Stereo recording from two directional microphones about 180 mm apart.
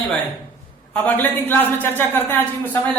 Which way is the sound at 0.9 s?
10° left (ahead or behind).